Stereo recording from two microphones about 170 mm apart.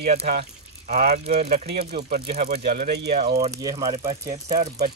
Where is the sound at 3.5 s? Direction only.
20° right (ahead or behind).